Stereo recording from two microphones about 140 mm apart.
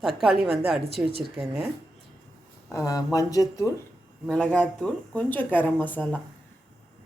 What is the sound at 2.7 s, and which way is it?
Speech, 25° left (ahead or behind).